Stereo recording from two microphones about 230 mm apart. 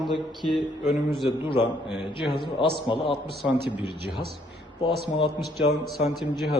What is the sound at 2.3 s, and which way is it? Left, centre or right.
Speech, left.